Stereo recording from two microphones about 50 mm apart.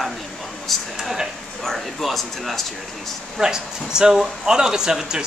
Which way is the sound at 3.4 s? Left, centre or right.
Centre.